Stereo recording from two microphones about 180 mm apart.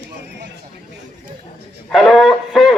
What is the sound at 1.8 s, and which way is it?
Speech, centre (ahead or behind).